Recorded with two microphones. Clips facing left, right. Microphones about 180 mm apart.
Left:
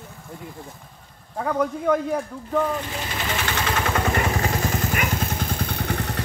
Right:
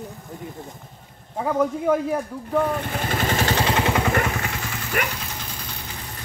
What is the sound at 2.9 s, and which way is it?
Vehicle, 50° right (ahead or behind).